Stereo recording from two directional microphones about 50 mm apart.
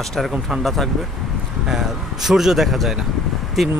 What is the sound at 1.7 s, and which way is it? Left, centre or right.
Speech, centre.